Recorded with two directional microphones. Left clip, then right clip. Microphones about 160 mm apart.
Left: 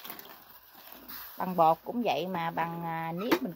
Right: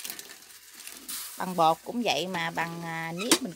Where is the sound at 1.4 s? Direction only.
40° right (ahead or behind).